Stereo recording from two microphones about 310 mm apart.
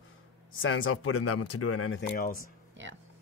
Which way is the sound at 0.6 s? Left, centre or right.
Left.